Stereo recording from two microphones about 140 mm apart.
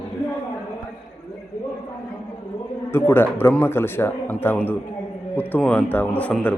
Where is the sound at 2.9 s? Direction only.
15° left (ahead or behind).